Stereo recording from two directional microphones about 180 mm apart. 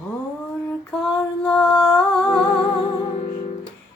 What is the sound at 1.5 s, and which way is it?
Music, 5° left (ahead or behind).